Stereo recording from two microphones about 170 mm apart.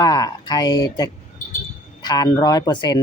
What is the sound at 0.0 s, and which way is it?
Speech, 25° left (ahead or behind).